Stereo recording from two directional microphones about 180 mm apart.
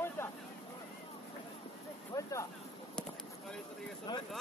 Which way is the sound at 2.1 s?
20° left (ahead or behind).